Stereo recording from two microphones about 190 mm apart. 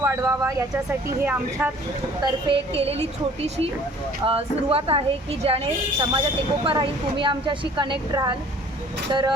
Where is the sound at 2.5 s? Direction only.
30° right (ahead or behind).